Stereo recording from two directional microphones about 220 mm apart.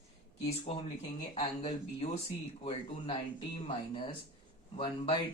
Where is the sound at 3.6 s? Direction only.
25° left (ahead or behind).